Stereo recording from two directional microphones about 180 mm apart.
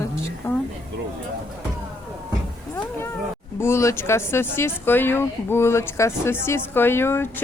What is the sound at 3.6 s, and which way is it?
Speech, 15° left (ahead or behind).